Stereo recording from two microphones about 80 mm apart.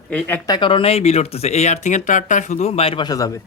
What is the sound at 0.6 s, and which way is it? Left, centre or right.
Speech, left.